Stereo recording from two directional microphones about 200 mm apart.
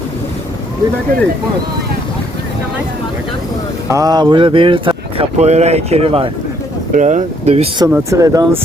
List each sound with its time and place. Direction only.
3.8 s speech: 15° right (ahead or behind)
7.9 s speech: 10° right (ahead or behind)